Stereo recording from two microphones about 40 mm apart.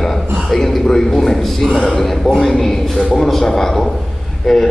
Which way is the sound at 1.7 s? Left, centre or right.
Centre.